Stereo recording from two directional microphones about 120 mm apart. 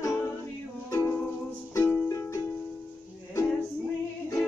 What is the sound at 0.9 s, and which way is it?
Music, 25° left (ahead or behind).